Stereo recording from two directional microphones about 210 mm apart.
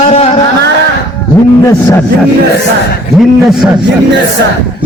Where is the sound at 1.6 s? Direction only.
15° left (ahead or behind).